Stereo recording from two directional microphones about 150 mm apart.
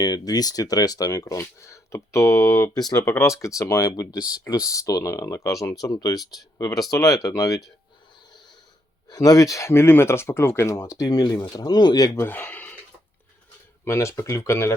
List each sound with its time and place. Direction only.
0.0 s speech: 25° left (ahead or behind)
9.0 s speech: 25° left (ahead or behind)
13.8 s speech: 20° left (ahead or behind)